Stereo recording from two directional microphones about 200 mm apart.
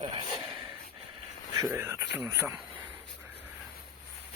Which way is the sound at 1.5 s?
15° right (ahead or behind).